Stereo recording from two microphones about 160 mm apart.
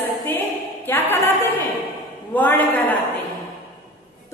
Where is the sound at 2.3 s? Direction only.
10° left (ahead or behind).